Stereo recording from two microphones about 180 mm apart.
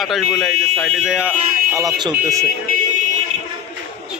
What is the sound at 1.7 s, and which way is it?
Speech, 20° right (ahead or behind).